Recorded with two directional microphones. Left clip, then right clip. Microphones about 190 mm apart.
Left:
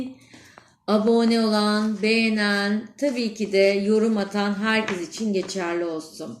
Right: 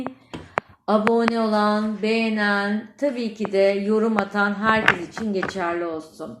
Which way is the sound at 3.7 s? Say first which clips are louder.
Even; 25° left (ahead or behind).